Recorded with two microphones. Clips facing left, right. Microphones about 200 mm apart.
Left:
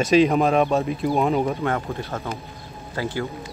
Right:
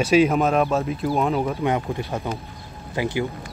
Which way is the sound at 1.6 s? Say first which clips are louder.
Right 2 dB; 15° right (ahead or behind).